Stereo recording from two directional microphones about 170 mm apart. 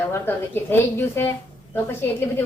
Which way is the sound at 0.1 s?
10° left (ahead or behind).